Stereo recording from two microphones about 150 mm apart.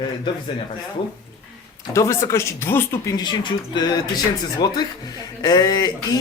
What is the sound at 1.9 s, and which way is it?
Speech, 20° left (ahead or behind).